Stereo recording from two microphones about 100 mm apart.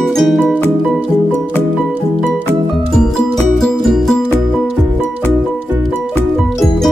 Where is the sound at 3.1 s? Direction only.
Centre (ahead or behind).